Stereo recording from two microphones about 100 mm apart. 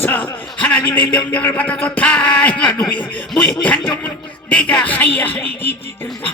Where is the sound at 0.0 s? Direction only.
15° left (ahead or behind).